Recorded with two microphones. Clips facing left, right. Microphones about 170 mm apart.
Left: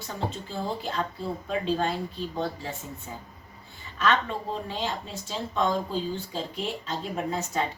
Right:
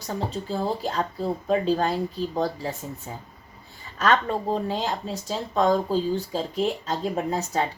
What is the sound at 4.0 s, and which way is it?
Speech, 45° right (ahead or behind).